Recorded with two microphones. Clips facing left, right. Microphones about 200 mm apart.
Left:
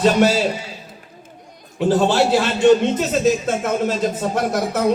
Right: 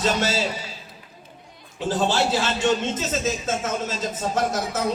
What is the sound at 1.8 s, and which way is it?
A man's voice, 55° left (ahead or behind).